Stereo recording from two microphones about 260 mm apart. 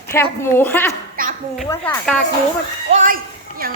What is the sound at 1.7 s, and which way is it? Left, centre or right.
Speech, centre.